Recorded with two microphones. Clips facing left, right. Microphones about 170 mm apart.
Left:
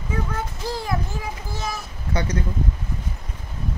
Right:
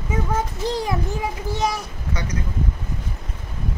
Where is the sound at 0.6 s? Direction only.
20° right (ahead or behind).